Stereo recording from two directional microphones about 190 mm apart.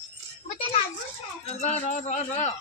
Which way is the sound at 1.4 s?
35° left (ahead or behind).